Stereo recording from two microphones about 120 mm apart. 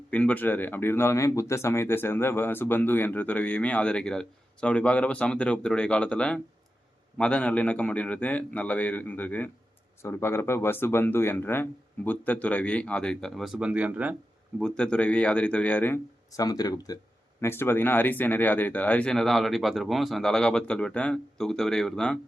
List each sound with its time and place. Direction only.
0.1 s speech: 10° left (ahead or behind); by 14.2 s 10° right (ahead or behind)
14.6 s speech: 5° left (ahead or behind)
16.3 s speech: 30° left (ahead or behind)
17.4 s speech: 20° left (ahead or behind)